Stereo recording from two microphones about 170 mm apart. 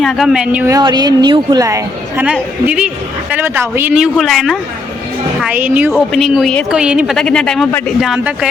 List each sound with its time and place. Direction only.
0.0 s a man's voice: centre (ahead or behind)
0.7 s a woman's voice: 25° right (ahead or behind)
2.2 s a man's voice: 5° right (ahead or behind)
5.9 s a man's voice: centre (ahead or behind)